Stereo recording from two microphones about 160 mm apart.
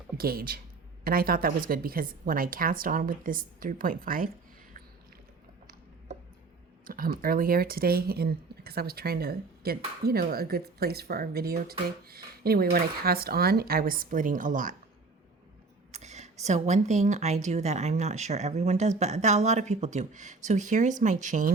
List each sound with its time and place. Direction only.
0.2 s a woman's voice: 70° right (ahead or behind)
6.8 s speech: 65° right (ahead or behind)
15.9 s speech: 45° right (ahead or behind)